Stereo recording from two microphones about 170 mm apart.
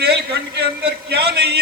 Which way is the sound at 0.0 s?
75° right (ahead or behind).